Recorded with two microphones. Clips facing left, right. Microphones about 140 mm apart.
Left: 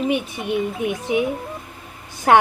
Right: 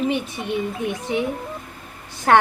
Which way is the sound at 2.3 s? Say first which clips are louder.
Left 1 dB; 15° left (ahead or behind).